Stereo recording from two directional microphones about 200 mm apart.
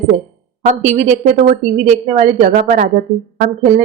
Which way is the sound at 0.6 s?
35° right (ahead or behind).